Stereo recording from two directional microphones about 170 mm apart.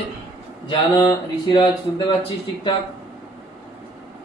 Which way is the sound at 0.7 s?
25° left (ahead or behind).